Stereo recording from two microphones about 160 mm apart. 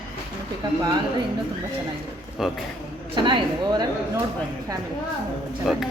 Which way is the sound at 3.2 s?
25° right (ahead or behind).